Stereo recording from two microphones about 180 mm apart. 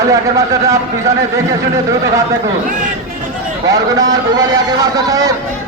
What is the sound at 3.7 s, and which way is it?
A man's voice, 20° right (ahead or behind).